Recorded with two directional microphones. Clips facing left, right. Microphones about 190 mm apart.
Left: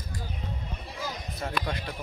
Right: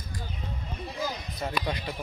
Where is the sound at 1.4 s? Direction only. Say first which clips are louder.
Right 1 dB; centre (ahead or behind).